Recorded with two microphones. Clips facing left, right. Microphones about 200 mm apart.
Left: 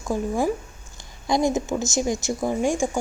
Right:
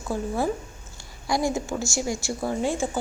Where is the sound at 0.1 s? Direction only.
15° left (ahead or behind).